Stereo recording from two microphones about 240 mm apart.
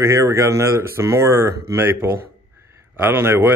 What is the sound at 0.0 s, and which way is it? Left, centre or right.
Speech, centre.